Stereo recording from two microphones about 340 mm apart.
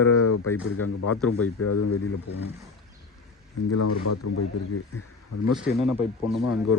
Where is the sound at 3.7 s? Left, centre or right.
Left.